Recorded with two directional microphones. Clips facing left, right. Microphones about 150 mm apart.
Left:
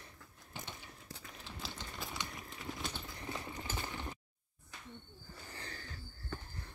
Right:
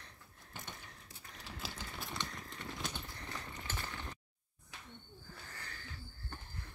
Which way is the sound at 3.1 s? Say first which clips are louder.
Left 4 dB; 15° left (ahead or behind).